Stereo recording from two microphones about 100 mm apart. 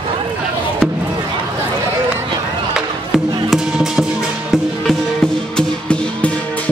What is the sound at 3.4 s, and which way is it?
Music, 5° right (ahead or behind).